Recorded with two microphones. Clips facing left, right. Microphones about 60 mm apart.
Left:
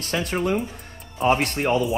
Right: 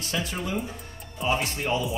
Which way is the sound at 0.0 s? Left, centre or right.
Left.